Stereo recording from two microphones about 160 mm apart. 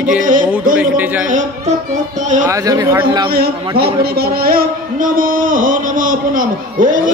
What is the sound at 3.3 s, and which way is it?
Speech, 75° right (ahead or behind).